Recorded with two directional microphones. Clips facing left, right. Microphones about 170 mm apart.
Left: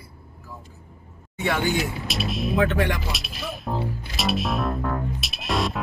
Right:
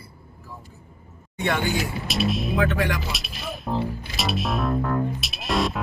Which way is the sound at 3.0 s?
Centre (ahead or behind).